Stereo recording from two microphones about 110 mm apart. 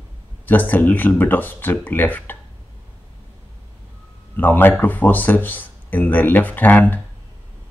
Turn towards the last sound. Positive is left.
turn(degrees=15)  # may be behind; listen again after turning